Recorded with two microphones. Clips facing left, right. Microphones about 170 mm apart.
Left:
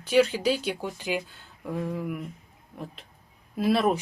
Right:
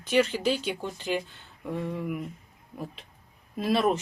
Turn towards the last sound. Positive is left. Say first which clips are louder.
# left 1 dB
turn(degrees=0)  # may be behind; listen again after turning